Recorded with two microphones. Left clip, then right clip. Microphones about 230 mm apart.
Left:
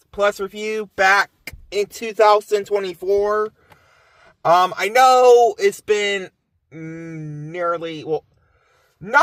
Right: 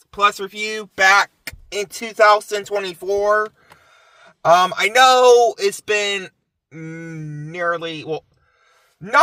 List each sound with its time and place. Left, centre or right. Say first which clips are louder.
0.1 s speech: right 2 dB; right